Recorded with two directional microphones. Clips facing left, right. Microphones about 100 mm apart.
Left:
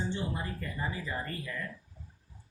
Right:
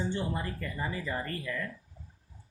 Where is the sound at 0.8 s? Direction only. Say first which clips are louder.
Right 2 dB; 90° right.